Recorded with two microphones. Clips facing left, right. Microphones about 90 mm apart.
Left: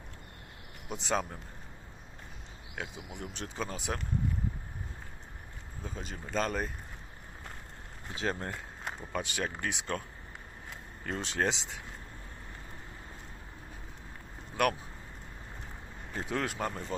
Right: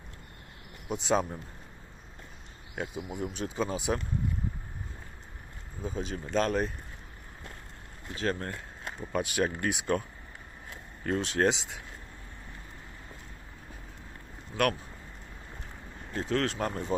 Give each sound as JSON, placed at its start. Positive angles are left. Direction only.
{"t": 0.9, "sound": "speech", "side_deg": 0}
{"t": 2.7, "sound": "speech", "side_deg": -5}
{"t": 5.8, "sound": "speech", "side_deg": 0}
{"t": 8.1, "sound": "speech", "side_deg": 20}
{"t": 9.0, "sound": "speech", "side_deg": -5}
{"t": 11.0, "sound": "speech", "side_deg": 0}
{"t": 14.5, "sound": "speech", "side_deg": 10}
{"t": 16.1, "sound": "speech", "side_deg": 10}
{"t": 16.6, "sound": "speech", "side_deg": 0}